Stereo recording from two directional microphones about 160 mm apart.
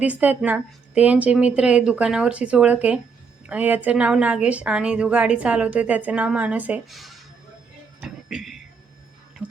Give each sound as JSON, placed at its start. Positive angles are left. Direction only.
{"t": 0.0, "sound": "a woman's voice", "side_deg": -10}
{"t": 8.0, "sound": "music", "side_deg": -5}